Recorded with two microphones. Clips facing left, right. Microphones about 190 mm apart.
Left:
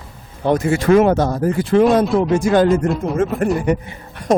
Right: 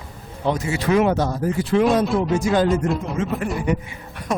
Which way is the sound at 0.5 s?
50° left (ahead or behind).